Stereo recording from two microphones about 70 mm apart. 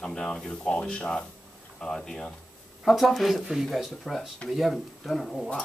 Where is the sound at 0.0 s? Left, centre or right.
Centre.